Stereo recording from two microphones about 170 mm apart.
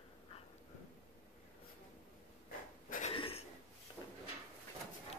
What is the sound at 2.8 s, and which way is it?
Cough, 50° left (ahead or behind).